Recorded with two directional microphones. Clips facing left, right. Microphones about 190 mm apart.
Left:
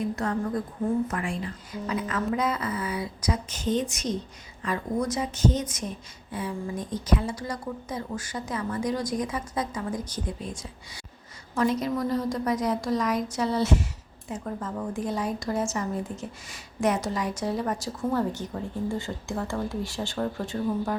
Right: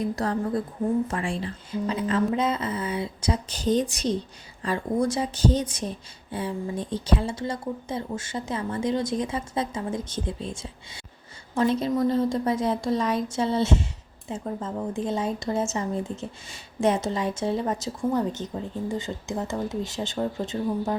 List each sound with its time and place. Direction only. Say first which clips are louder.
0.0 s a woman's voice: right 2 dB; 35° right (ahead or behind)